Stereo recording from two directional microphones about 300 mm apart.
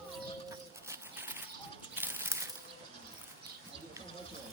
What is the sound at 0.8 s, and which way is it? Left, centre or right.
Bird, centre.